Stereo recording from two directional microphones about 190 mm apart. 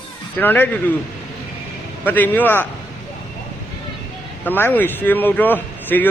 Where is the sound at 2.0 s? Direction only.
10° left (ahead or behind).